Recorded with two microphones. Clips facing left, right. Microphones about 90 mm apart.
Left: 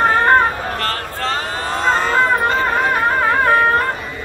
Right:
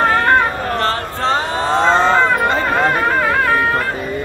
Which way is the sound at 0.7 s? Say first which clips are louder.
Right 4 dB; 25° right (ahead or behind).